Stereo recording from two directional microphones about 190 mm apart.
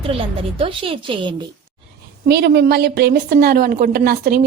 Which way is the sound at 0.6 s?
30° right (ahead or behind).